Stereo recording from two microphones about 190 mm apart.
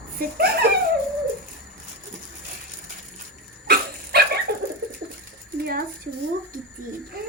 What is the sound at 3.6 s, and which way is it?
Dog, 60° right (ahead or behind).